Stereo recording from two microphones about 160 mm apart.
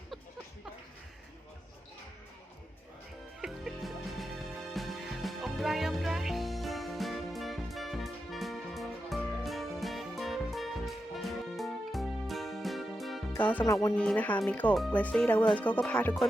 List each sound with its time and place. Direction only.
3.4 s music: centre (ahead or behind)
13.3 s speech: 10° left (ahead or behind)